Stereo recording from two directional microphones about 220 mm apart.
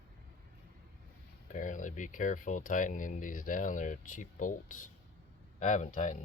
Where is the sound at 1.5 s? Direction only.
35° left (ahead or behind).